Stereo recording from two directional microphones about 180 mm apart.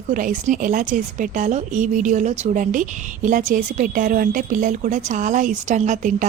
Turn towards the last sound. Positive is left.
turn(degrees=-45)  # may be behind; listen again after turning